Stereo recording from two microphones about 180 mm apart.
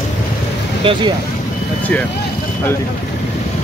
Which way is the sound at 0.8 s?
30° right (ahead or behind).